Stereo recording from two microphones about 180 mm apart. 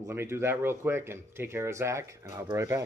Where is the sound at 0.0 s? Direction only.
15° right (ahead or behind).